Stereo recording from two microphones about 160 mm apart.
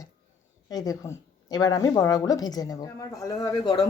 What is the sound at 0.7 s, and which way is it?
A woman's voice, 25° left (ahead or behind).